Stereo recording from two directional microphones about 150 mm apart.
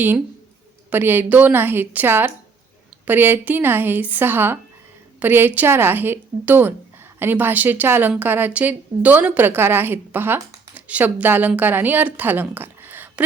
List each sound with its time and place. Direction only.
0.9 s a woman's voice: 15° right (ahead or behind)